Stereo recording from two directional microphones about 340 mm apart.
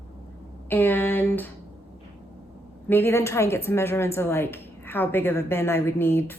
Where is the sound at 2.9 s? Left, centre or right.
Centre.